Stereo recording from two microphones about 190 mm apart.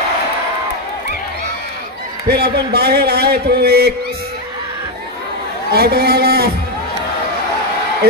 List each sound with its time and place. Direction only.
2.2 s a man's voice: 55° right (ahead or behind)
5.7 s a man's voice: 55° right (ahead or behind)